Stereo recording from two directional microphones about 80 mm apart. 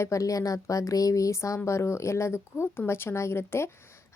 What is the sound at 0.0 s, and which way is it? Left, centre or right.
A woman's voice, left.